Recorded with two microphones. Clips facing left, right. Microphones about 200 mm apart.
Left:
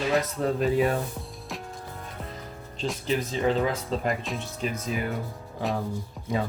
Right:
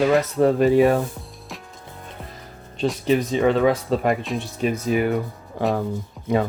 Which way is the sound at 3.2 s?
65° right (ahead or behind).